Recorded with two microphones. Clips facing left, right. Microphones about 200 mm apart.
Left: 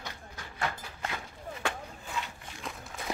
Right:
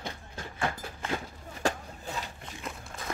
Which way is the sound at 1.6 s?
40° right (ahead or behind).